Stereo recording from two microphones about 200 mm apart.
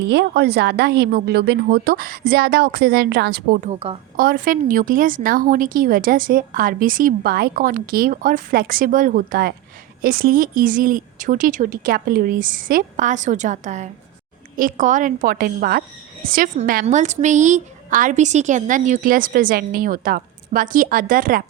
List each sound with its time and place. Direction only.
0.0 s a woman's voice: 60° right (ahead or behind)
3.7 s a woman's voice: 30° right (ahead or behind)
4.2 s a woman's voice: 45° right (ahead or behind)